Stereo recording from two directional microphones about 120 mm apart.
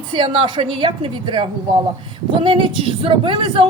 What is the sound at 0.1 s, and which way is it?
A woman's voice, 45° right (ahead or behind).